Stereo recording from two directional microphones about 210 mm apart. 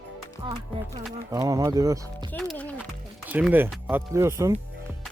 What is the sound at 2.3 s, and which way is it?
Speech, 5° left (ahead or behind).